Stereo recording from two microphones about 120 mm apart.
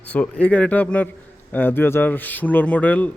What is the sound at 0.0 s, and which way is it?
A man's voice, 10° left (ahead or behind).